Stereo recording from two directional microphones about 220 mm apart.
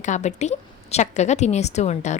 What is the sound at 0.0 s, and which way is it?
A woman's voice, 35° left (ahead or behind).